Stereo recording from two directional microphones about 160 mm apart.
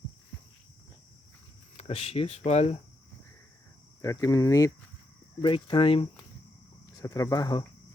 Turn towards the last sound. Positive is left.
turn(degrees=25)  # may be behind; listen again after turning